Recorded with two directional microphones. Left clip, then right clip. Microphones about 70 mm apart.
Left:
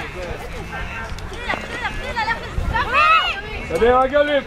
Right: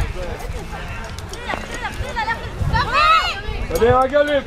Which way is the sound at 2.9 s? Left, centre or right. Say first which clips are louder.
Even; centre.